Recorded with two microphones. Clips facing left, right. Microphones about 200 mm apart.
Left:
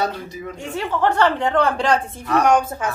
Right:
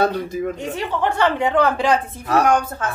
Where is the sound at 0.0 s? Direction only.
50° right (ahead or behind).